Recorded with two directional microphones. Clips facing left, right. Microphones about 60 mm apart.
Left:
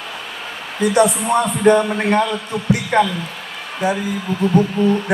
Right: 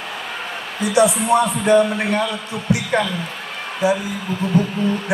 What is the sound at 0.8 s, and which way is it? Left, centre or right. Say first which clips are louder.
A man's voice: left 1 dB; left.